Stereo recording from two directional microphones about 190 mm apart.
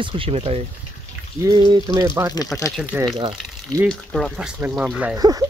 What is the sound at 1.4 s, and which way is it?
Speech, 20° right (ahead or behind).